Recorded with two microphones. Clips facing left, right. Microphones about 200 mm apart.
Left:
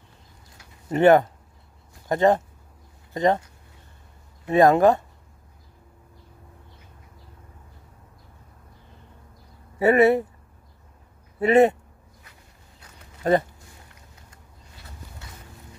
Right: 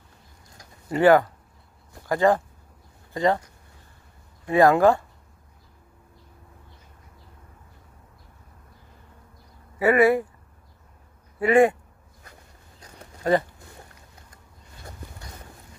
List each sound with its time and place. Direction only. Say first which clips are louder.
0.8 s speech: left 1 dB; 20° left (ahead or behind)
4.5 s speech: left 1 dB; 20° left (ahead or behind)
9.8 s speech: left 1 dB; 25° left (ahead or behind)
11.3 s speech: left 1 dB; 25° left (ahead or behind)